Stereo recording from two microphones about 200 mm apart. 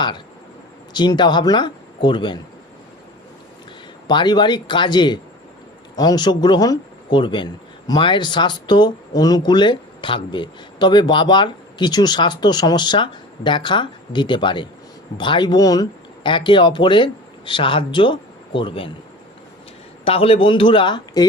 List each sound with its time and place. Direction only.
0.9 s speech: 20° left (ahead or behind)
4.0 s speech: 20° left (ahead or behind)
20.1 s speech: 30° left (ahead or behind)